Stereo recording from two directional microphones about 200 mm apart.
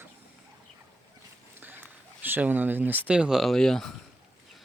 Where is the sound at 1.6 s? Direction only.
10° right (ahead or behind).